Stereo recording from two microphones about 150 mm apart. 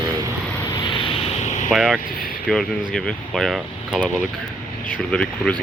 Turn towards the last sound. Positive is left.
turn(degrees=5)  # may be behind; listen again after turning